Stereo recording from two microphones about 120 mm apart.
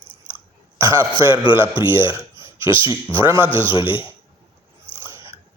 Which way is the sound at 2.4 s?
45° left (ahead or behind).